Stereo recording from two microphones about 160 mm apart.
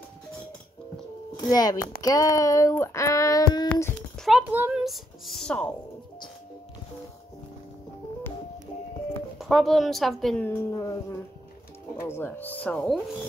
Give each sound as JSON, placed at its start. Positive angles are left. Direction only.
{"t": 1.3, "sound": "speech", "side_deg": 25}
{"t": 2.0, "sound": "a sound", "side_deg": 20}
{"t": 4.2, "sound": "speech", "side_deg": -5}
{"t": 9.4, "sound": "speech", "side_deg": 0}
{"t": 10.7, "sound": "a sound", "side_deg": 20}
{"t": 12.0, "sound": "speech", "side_deg": 15}